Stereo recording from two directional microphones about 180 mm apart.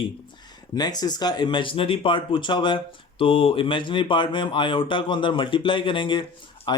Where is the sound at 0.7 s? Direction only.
20° left (ahead or behind).